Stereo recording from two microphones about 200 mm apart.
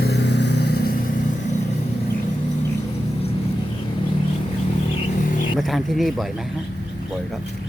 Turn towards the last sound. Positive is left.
turn(degrees=0)  # may be behind; listen again after turning